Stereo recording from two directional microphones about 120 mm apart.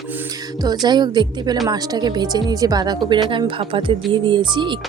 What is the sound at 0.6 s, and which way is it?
Speech, 35° right (ahead or behind).